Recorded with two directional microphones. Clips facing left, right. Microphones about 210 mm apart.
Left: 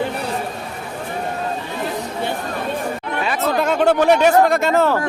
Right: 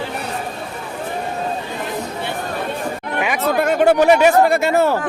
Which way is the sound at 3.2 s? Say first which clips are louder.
Right 2 dB; 15° right (ahead or behind).